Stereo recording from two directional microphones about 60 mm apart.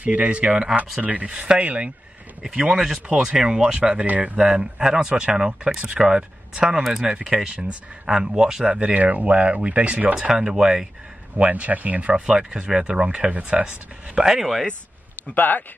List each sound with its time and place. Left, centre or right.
0.0 s speech: right
4.5 s speech: centre
11.3 s speech: right
14.1 s speech: centre
15.3 s speech: left